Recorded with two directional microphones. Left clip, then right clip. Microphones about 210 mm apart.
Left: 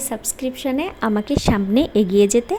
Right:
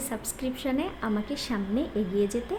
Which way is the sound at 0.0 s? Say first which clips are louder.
Left 8 dB; 30° left (ahead or behind).